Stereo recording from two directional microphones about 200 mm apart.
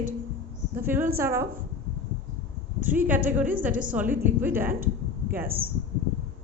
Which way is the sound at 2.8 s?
10° right (ahead or behind).